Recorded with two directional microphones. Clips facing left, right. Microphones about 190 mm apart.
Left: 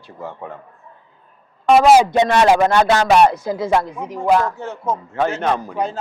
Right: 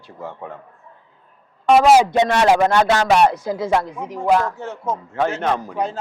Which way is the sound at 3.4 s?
10° left (ahead or behind).